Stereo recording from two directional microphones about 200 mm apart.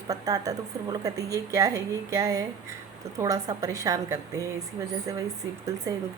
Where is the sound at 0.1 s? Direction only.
15° right (ahead or behind).